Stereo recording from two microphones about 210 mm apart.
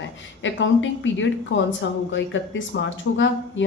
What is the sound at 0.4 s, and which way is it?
A woman's voice, 65° left (ahead or behind).